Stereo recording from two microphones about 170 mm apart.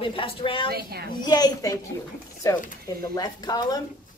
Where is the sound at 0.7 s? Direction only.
65° right (ahead or behind).